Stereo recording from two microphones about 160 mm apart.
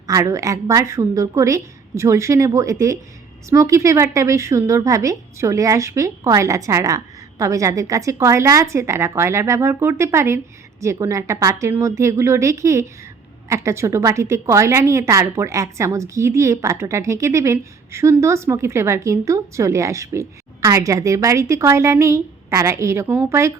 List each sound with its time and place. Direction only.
0.1 s a woman's voice: 20° right (ahead or behind)